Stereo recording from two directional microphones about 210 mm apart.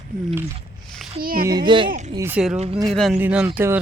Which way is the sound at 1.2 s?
45° right (ahead or behind).